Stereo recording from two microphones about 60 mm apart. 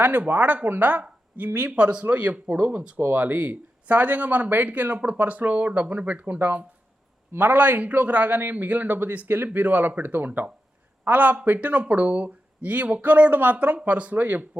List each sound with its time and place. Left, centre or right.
0.0 s speech: right